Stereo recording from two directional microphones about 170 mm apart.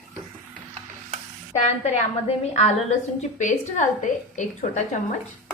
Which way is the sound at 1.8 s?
40° left (ahead or behind).